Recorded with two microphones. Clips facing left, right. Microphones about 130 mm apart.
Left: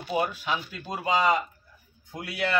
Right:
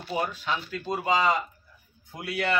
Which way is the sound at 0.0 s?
10° left (ahead or behind).